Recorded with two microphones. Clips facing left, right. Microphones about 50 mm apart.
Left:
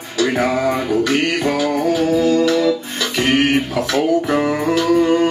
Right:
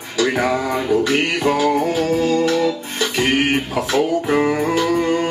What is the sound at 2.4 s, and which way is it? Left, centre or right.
Music, right.